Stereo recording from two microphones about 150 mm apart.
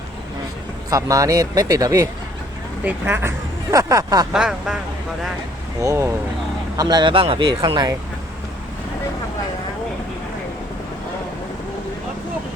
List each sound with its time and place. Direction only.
0.9 s speech: 20° right (ahead or behind)
4.3 s speech: 5° right (ahead or behind)
5.8 s speech: 20° right (ahead or behind)